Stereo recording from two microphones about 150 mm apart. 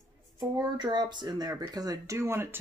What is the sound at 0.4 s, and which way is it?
Speech, 30° right (ahead or behind).